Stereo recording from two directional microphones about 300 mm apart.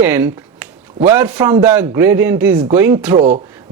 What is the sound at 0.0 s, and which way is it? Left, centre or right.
Speech, centre.